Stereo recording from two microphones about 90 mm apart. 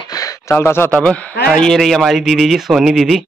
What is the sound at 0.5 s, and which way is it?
Speech, 25° left (ahead or behind).